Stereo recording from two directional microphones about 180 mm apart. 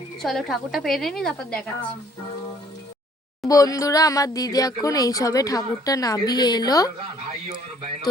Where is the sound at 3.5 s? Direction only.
20° left (ahead or behind).